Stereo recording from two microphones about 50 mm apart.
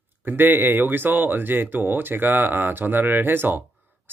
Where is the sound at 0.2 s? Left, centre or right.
Right.